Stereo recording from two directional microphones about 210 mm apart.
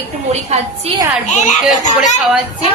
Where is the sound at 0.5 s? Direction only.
30° right (ahead or behind).